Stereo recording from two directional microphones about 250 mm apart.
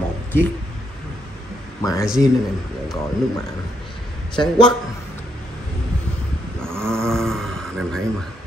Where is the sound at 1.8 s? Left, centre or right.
Centre.